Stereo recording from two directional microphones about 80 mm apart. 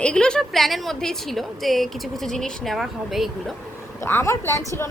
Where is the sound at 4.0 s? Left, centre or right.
Left.